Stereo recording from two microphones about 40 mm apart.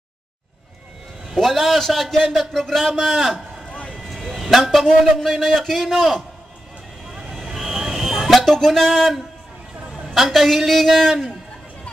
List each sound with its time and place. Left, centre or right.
1.3 s a man's voice: centre
3.9 s a sound: centre
5.4 s a woman's voice: centre
7.1 s vehicle: centre
7.5 s a sound: centre
8.5 s speech: centre
10.0 s a woman's voice: centre